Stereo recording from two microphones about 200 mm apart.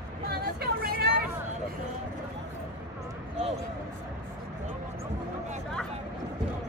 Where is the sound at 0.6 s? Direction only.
50° right (ahead or behind).